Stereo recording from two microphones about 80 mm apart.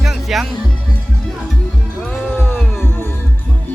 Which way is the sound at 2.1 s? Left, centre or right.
Centre.